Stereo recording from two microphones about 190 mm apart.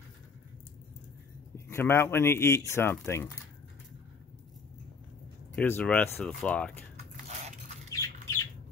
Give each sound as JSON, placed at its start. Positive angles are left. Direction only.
{"t": 1.7, "sound": "speech", "side_deg": 10}
{"t": 5.6, "sound": "speech", "side_deg": 5}
{"t": 7.9, "sound": "squawk", "side_deg": 15}